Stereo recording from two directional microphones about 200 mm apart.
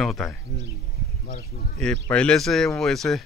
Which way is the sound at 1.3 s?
50° left (ahead or behind).